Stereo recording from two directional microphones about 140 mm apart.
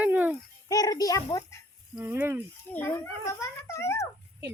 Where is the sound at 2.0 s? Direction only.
10° right (ahead or behind).